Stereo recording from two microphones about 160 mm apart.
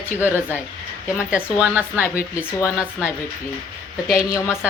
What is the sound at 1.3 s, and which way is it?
Speech, 10° right (ahead or behind).